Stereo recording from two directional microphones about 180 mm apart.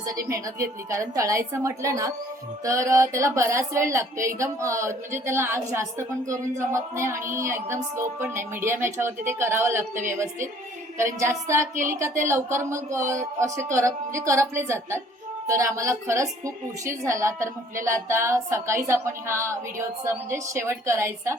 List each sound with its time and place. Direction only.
0.0 s speech: 20° right (ahead or behind)